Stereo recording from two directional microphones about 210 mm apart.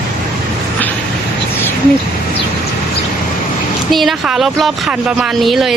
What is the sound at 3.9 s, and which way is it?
Speech, centre (ahead or behind).